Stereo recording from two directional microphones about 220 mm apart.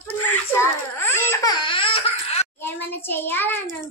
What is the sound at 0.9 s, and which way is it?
Laughter, 10° left (ahead or behind).